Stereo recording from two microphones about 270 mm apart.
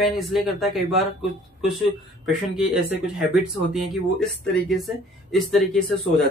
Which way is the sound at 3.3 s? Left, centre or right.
Centre.